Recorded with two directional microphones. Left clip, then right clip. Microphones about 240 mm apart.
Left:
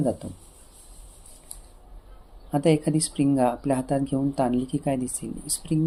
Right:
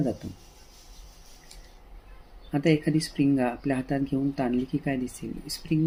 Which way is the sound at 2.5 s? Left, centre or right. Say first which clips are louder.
Left 2 dB; centre.